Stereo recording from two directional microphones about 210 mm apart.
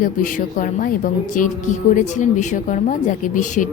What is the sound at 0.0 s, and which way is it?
Speech, 40° left (ahead or behind).